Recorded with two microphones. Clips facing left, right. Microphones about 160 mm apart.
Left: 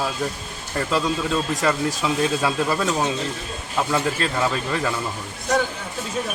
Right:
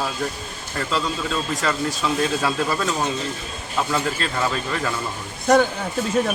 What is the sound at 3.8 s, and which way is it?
Speech, 5° left (ahead or behind).